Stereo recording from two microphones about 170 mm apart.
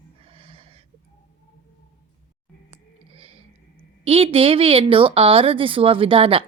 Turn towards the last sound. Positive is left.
turn(degrees=-30)  # may be behind; listen again after turning